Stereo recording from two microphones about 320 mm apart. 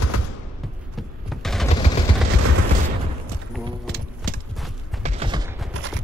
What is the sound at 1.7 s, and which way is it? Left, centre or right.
Vehicle, left.